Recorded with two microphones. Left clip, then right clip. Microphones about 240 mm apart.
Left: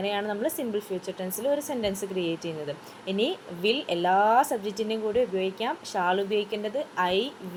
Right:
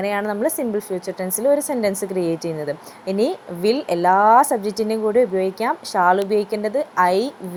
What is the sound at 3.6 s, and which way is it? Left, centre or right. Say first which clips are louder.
Speech: right 7 dB; right.